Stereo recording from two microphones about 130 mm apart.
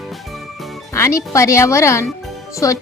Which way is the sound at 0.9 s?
20° left (ahead or behind).